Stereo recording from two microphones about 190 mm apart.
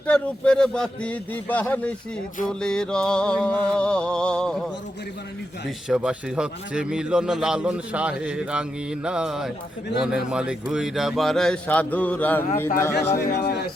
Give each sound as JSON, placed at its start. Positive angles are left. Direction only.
{"t": 0.1, "sound": "a man's voice", "side_deg": 5}
{"t": 5.9, "sound": "speech", "side_deg": -5}
{"t": 13.1, "sound": "a man's voice", "side_deg": 60}